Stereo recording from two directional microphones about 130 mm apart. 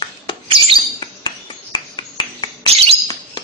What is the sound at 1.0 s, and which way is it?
Cricket, 35° left (ahead or behind).